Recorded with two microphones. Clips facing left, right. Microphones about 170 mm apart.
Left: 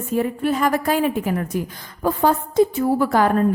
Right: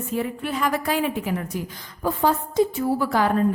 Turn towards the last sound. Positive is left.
turn(degrees=50)  # may be behind; listen again after turning